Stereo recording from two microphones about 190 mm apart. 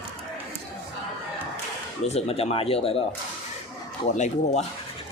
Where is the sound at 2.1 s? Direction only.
35° left (ahead or behind).